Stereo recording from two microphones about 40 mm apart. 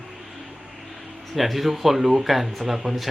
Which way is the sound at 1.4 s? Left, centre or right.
Centre.